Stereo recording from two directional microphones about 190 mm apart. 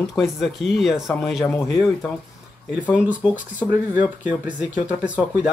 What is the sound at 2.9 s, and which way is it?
Speech, 10° right (ahead or behind).